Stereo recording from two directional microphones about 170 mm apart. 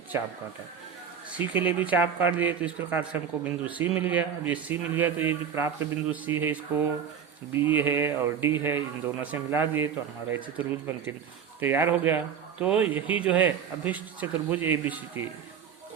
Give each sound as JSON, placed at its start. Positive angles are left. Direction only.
{"t": 0.1, "sound": "speech", "side_deg": -15}